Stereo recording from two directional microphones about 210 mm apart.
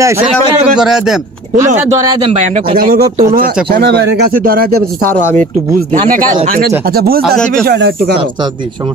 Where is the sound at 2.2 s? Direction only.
30° right (ahead or behind).